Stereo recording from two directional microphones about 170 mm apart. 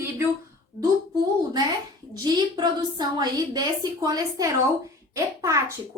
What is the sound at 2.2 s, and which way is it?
A woman's voice, 25° right (ahead or behind).